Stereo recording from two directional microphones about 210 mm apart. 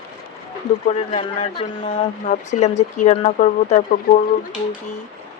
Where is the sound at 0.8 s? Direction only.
30° left (ahead or behind).